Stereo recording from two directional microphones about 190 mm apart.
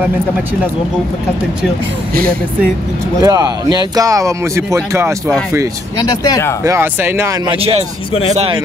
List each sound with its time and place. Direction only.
3.2 s speech: 20° right (ahead or behind)
5.9 s speech: 20° left (ahead or behind)
6.6 s speech: 15° right (ahead or behind)
7.4 s speech: 30° right (ahead or behind)